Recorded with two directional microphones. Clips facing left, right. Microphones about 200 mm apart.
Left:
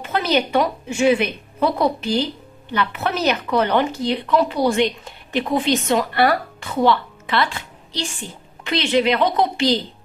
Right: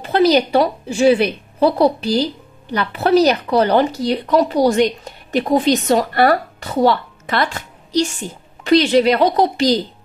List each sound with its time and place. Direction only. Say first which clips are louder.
0.0 s a woman's voice: right 7 dB; 35° right (ahead or behind)